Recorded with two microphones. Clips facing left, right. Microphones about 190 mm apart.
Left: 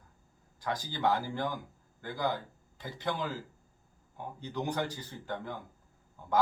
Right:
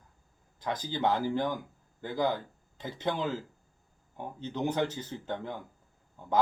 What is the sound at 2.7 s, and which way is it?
Speech, 20° right (ahead or behind).